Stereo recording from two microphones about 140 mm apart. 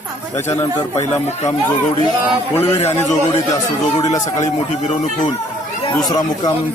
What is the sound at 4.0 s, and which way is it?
Speech, 25° left (ahead or behind).